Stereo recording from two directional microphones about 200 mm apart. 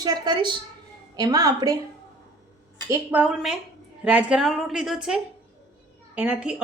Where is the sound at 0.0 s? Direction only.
20° right (ahead or behind).